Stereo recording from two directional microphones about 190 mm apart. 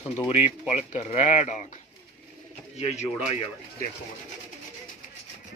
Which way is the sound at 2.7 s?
35° left (ahead or behind).